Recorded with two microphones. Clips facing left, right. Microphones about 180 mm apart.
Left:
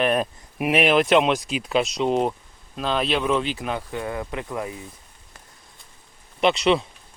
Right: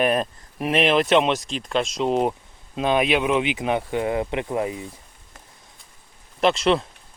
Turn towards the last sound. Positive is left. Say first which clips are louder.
# even
turn(degrees=0)  # may be behind; listen again after turning